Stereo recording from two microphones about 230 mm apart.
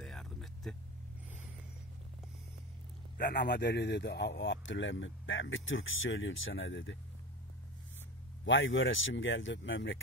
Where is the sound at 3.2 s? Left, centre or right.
Left.